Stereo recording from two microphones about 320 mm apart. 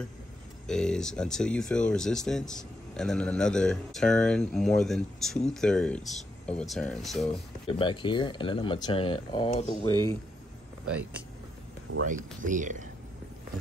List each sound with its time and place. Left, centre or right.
0.7 s speech: centre
7.6 s speech: centre
12.0 s speech: right